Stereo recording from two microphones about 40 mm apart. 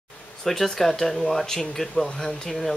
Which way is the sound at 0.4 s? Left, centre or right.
Centre.